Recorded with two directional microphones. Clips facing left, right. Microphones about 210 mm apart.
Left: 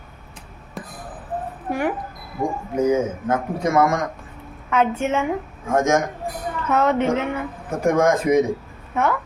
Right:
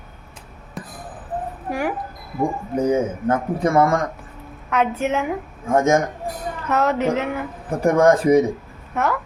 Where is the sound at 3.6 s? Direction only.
35° right (ahead or behind).